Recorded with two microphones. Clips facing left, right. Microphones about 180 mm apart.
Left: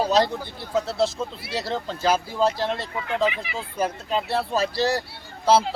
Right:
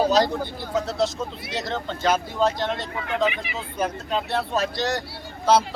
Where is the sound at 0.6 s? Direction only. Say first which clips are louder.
Left 2 dB; 30° left (ahead or behind).